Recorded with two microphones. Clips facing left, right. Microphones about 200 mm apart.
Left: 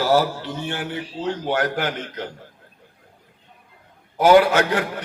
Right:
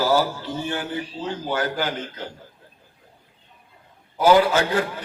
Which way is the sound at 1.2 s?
70° left (ahead or behind).